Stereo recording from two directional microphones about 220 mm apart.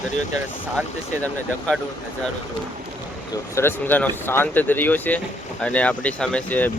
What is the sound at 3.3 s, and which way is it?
Speech, 10° left (ahead or behind).